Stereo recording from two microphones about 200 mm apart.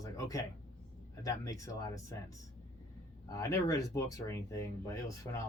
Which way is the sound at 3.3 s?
15° left (ahead or behind).